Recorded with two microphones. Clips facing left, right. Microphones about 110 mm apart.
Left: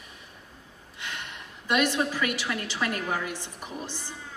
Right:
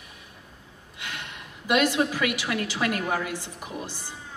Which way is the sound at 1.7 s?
15° right (ahead or behind).